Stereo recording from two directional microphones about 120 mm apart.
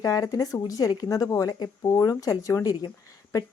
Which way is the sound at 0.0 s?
30° left (ahead or behind).